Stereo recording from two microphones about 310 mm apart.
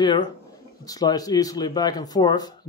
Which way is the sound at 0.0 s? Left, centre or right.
Centre.